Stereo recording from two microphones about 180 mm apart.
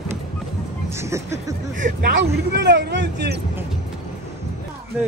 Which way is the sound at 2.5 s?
70° right (ahead or behind).